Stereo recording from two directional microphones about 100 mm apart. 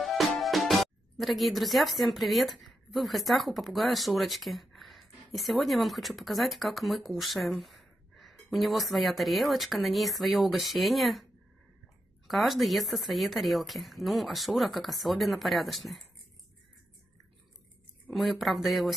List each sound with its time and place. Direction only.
0.0 s speech: centre (ahead or behind)
12.3 s speech: centre (ahead or behind)
18.1 s speech: centre (ahead or behind)